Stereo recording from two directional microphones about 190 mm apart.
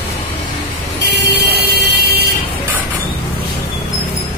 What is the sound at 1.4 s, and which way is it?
Music, 60° right (ahead or behind).